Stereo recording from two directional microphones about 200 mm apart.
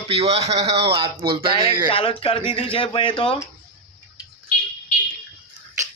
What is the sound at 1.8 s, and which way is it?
Speech, 25° left (ahead or behind).